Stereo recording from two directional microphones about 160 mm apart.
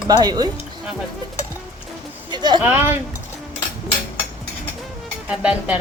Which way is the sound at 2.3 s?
30° right (ahead or behind).